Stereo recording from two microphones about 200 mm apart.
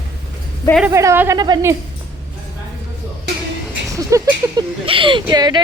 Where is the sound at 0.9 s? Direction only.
15° right (ahead or behind).